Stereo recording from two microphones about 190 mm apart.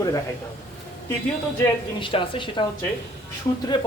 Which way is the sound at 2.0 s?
25° left (ahead or behind).